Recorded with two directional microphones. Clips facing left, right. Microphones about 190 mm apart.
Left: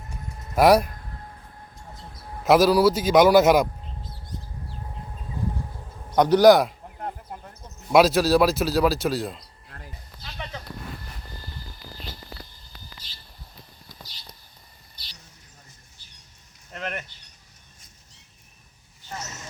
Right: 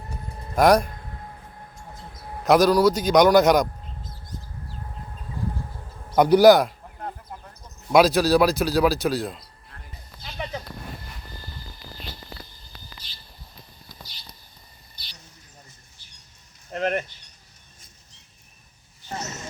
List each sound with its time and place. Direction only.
0.5 s speech: 5° left (ahead or behind)
2.4 s speech: 5° left (ahead or behind)
6.1 s speech: 10° right (ahead or behind)
7.9 s speech: centre (ahead or behind)
10.4 s a sound: 15° right (ahead or behind)
16.7 s a sound: 35° right (ahead or behind)